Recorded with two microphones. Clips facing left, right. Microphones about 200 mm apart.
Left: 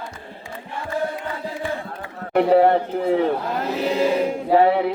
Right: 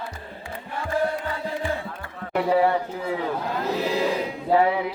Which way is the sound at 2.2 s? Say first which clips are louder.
Left 5 dB; 55° left (ahead or behind).